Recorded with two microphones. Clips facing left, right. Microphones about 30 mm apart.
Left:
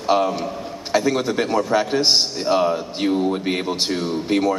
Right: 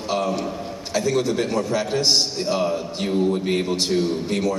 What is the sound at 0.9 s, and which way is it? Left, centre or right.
A man's voice, left.